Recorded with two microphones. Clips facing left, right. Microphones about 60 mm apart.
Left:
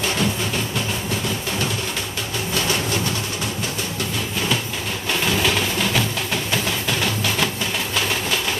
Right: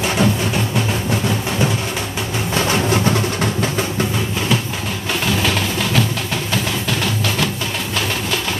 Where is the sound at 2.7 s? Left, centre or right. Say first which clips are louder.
Right 6 dB; right.